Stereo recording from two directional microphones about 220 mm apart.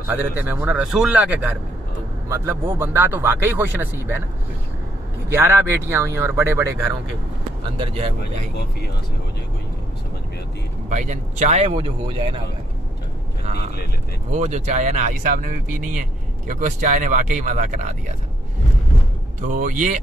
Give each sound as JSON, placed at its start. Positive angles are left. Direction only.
{"t": 0.0, "sound": "speech", "side_deg": -10}
{"t": 5.3, "sound": "speech", "side_deg": -10}
{"t": 7.7, "sound": "speech", "side_deg": -25}
{"t": 10.9, "sound": "speech", "side_deg": -35}
{"t": 14.3, "sound": "speech", "side_deg": -35}
{"t": 19.4, "sound": "speech", "side_deg": -35}